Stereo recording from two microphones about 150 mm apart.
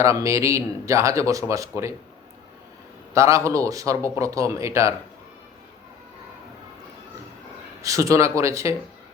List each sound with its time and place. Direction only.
0.0 s a man's voice: 20° right (ahead or behind)
3.2 s a man's voice: 20° right (ahead or behind)
7.8 s a man's voice: 20° right (ahead or behind)